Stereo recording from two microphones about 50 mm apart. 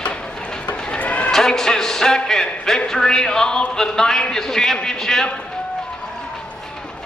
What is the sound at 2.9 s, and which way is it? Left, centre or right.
A man's voice, centre.